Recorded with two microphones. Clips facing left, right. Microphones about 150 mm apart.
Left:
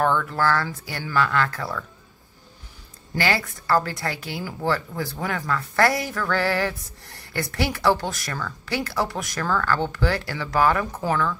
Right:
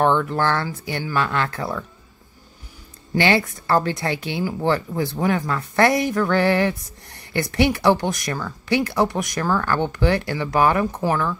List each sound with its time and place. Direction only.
0.0 s a woman's voice: 20° right (ahead or behind)
3.2 s a woman's voice: 20° right (ahead or behind)